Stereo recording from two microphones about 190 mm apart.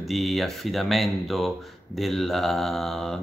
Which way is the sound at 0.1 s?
Centre (ahead or behind).